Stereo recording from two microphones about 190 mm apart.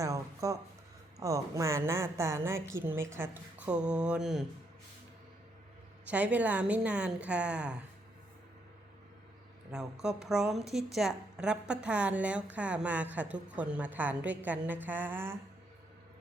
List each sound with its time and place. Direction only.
0.0 s a woman's voice: 15° right (ahead or behind)
6.1 s a woman's voice: 5° right (ahead or behind)
9.7 s a woman's voice: 5° right (ahead or behind)